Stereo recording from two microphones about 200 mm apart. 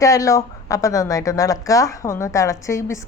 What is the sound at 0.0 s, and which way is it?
Speech, 15° left (ahead or behind).